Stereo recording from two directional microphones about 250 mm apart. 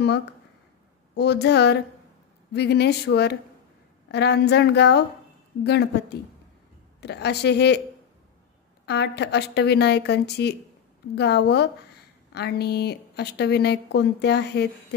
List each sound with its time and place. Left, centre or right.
1.1 s speech: left
8.8 s speech: left